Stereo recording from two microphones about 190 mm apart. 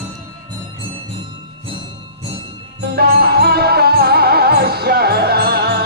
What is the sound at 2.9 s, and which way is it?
Music, 55° right (ahead or behind).